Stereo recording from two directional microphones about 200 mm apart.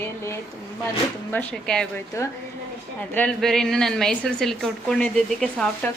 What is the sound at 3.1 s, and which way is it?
A woman's voice, 5° left (ahead or behind).